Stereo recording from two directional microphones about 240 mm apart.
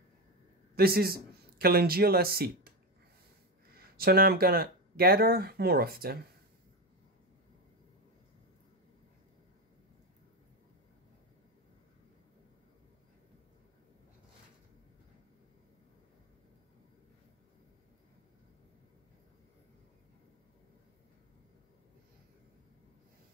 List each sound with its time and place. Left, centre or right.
0.7 s a man's voice: right
3.7 s speech: right